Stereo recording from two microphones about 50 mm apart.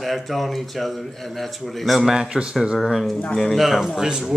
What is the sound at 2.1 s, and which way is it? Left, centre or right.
Speech, centre.